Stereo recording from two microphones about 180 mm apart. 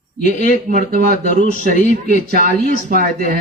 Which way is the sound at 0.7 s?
50° right (ahead or behind).